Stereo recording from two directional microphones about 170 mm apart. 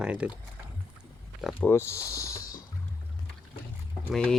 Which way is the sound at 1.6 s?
15° left (ahead or behind).